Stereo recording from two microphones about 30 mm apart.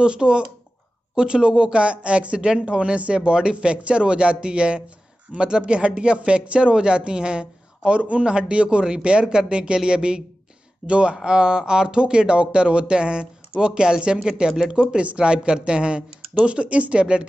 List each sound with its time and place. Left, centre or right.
0.0 s a woman's voice: right
17.0 s a woman's voice: right